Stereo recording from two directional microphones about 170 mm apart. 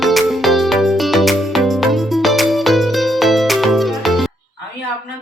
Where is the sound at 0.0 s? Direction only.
Centre (ahead or behind).